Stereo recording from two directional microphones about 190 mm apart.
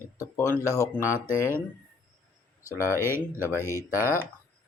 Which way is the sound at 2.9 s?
10° right (ahead or behind).